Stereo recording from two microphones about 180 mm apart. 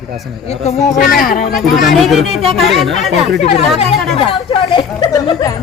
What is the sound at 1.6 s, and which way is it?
A woman's voice, centre (ahead or behind).